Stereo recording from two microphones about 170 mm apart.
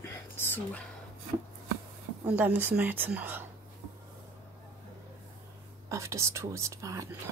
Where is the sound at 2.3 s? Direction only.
10° right (ahead or behind).